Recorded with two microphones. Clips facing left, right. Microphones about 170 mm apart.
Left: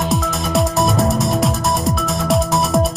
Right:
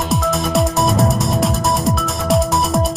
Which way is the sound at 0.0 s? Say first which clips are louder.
Right 1 dB; centre (ahead or behind).